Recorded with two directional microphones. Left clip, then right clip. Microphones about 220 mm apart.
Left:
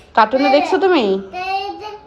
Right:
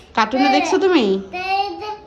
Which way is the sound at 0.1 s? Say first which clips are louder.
Left 3 dB; 15° right (ahead or behind).